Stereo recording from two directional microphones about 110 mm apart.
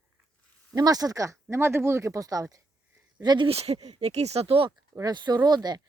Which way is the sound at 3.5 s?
65° right (ahead or behind).